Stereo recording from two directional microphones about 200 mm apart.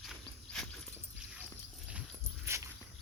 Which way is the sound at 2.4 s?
15° right (ahead or behind).